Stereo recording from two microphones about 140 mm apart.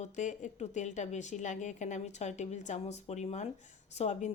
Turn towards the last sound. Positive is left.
turn(degrees=55)  # may be behind; listen again after turning